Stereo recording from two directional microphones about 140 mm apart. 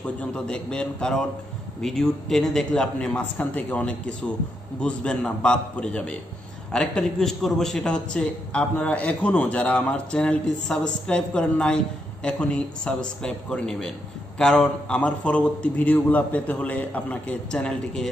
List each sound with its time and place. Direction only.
0.2 s a man's voice: 5° left (ahead or behind)